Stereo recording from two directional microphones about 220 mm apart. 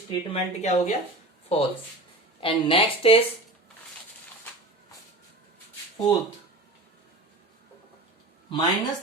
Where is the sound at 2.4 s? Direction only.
25° left (ahead or behind).